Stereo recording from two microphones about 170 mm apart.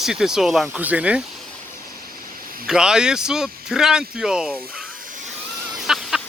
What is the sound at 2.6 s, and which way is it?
Speech, 5° right (ahead or behind).